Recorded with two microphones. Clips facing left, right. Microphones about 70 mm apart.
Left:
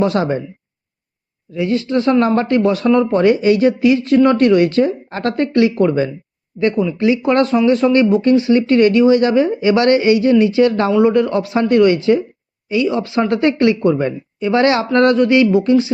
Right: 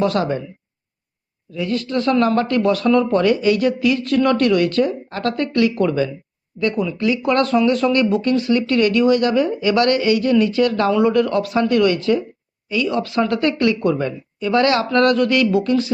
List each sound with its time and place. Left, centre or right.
0.0 s speech: left
1.5 s speech: left
10.8 s speech: centre